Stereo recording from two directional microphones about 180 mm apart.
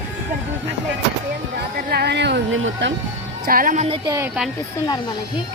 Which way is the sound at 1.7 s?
60° right (ahead or behind).